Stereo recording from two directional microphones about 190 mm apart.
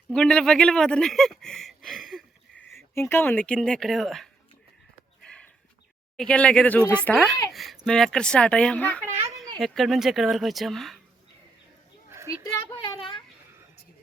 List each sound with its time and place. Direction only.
0.1 s speech: 5° left (ahead or behind)
2.7 s speech: 15° left (ahead or behind)
5.2 s chicken: 5° left (ahead or behind)
6.1 s speech: 5° left (ahead or behind)
12.7 s a sound: 25° left (ahead or behind)